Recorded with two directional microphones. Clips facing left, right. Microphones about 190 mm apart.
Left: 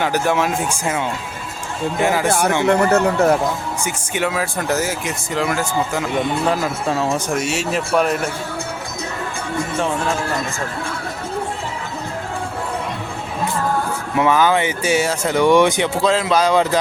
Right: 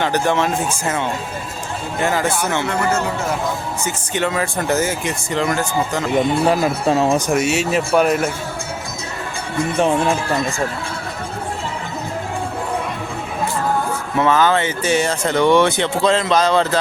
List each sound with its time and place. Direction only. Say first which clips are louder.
0.0 s speech: even; 10° left (ahead or behind)
2.6 s speech: left 5 dB; 60° left (ahead or behind)
3.8 s speech: right 1 dB; 10° left (ahead or behind)
6.5 s speech: right 4 dB; 20° right (ahead or behind)
7.3 s speech: right 3 dB; centre (ahead or behind)
9.7 s speech: right 5 dB; 20° right (ahead or behind)
14.2 s speech: even; 10° left (ahead or behind)